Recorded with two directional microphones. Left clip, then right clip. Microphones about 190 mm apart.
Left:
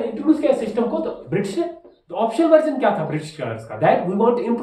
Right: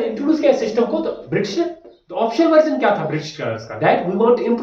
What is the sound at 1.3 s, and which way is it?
Speech, 15° left (ahead or behind).